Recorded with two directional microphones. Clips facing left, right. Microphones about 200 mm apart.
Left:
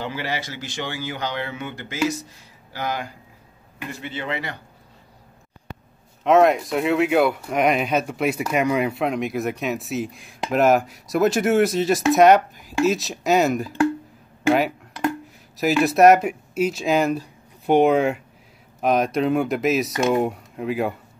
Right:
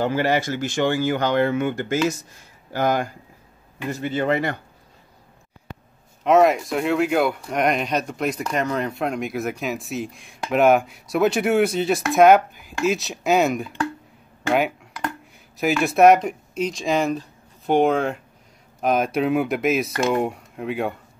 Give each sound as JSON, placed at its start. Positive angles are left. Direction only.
{"t": 0.0, "sound": "speech", "side_deg": -50}
{"t": 6.2, "sound": "speech", "side_deg": 0}
{"t": 15.8, "sound": "speech", "side_deg": 0}